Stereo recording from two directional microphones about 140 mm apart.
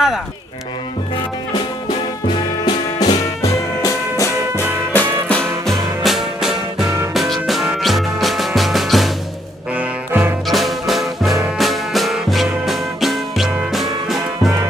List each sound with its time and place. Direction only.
2.2 s music: 30° left (ahead or behind); by 9.1 s centre (ahead or behind)
9.8 s music: 15° right (ahead or behind)
10.4 s music: centre (ahead or behind)